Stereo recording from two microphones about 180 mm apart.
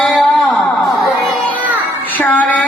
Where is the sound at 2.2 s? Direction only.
10° left (ahead or behind).